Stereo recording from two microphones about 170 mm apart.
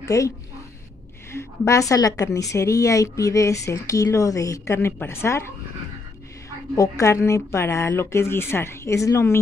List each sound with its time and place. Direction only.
0.0 s a woman's voice: 20° left (ahead or behind)
1.3 s a woman's voice: 15° left (ahead or behind)
6.7 s speech: 20° left (ahead or behind)